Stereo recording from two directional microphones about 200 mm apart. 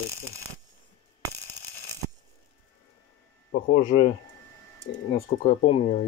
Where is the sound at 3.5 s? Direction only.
40° left (ahead or behind).